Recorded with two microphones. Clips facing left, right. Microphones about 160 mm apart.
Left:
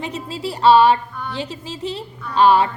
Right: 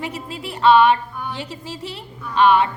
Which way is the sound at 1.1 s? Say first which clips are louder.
Even; 10° right (ahead or behind).